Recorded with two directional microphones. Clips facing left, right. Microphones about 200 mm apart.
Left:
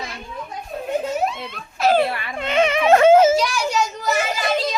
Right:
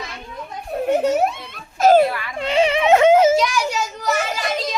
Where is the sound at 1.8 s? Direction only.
45° right (ahead or behind).